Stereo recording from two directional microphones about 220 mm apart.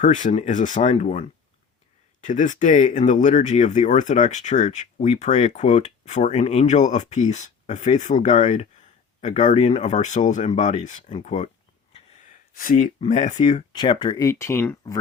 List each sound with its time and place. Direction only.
0.0 s speech: 35° left (ahead or behind)
2.2 s speech: 35° left (ahead or behind)
11.9 s gasp: 35° left (ahead or behind)
13.1 s speech: 30° left (ahead or behind); by 14.9 s 10° left (ahead or behind)